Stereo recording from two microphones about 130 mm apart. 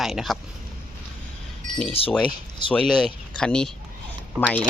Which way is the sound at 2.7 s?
5° left (ahead or behind).